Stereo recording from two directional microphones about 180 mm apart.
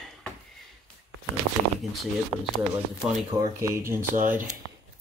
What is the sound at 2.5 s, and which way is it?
Speech, centre (ahead or behind).